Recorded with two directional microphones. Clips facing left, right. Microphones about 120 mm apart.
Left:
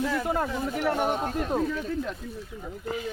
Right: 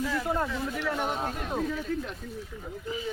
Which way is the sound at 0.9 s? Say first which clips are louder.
Left 5 dB; 45° left (ahead or behind).